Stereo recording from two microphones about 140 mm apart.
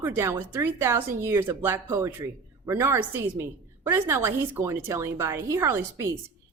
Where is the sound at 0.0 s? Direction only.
15° right (ahead or behind).